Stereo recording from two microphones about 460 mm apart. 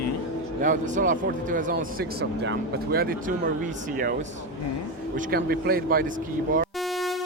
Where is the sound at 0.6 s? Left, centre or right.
Centre.